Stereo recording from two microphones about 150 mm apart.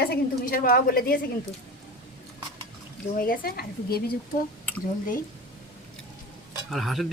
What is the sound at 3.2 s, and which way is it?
Speech, 80° left.